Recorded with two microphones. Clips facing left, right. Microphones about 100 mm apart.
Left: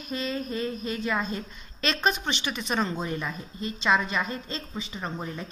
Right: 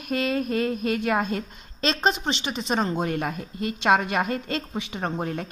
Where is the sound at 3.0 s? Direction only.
60° right (ahead or behind).